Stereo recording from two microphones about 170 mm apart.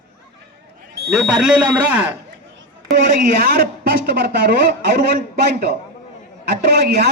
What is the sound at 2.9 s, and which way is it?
A man's voice, 65° right (ahead or behind).